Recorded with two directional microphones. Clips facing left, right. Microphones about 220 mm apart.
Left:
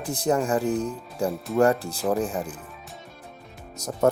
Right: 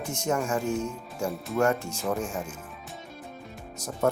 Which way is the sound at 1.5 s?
35° left (ahead or behind).